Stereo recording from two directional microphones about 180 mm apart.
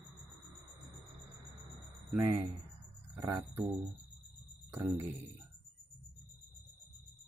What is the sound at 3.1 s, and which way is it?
Speech, 15° right (ahead or behind).